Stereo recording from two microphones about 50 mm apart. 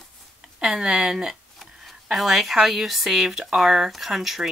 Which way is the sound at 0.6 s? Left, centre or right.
Centre.